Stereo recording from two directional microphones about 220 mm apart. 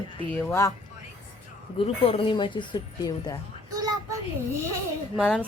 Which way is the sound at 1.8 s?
25° left (ahead or behind).